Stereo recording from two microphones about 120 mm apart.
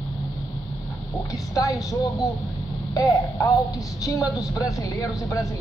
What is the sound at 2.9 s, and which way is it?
A woman's voice, 30° left (ahead or behind).